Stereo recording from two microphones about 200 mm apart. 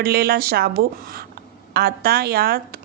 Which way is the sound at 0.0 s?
50° right (ahead or behind).